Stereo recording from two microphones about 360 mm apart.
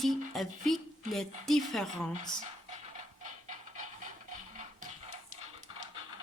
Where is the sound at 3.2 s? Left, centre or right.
Right.